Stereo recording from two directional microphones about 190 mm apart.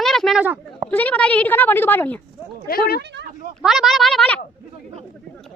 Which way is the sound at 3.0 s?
65° right (ahead or behind).